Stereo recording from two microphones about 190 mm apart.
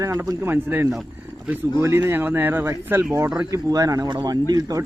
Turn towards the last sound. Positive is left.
turn(degrees=-20)  # may be behind; listen again after turning